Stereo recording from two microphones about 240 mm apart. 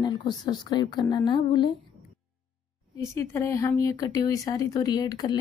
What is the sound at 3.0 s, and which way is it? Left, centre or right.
A woman's voice, centre.